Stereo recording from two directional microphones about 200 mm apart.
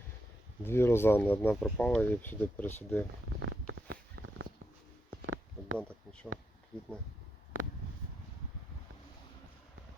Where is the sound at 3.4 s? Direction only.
90° right.